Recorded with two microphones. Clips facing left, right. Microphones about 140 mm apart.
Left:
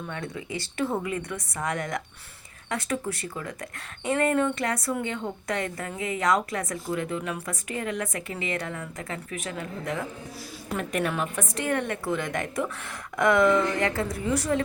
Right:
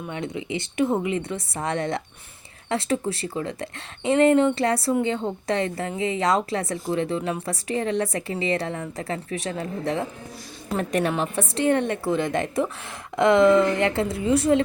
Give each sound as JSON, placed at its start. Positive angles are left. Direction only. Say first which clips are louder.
{"t": 0.1, "sound": "a woman's voice", "louder": "right 7 dB", "side_deg": -20}